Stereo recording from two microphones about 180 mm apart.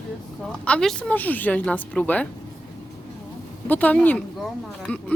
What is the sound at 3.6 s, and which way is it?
Speech, 10° left (ahead or behind).